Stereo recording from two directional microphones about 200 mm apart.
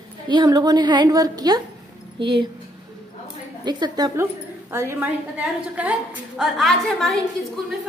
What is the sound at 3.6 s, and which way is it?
A woman's voice, 20° right (ahead or behind).